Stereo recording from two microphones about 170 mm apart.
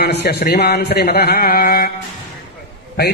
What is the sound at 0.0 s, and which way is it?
Speech, 75° left (ahead or behind).